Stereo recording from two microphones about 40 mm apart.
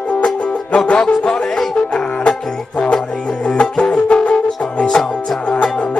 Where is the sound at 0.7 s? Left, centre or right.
Left.